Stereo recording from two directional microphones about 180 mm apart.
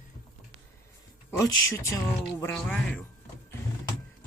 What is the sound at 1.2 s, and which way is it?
Speech, 20° left (ahead or behind).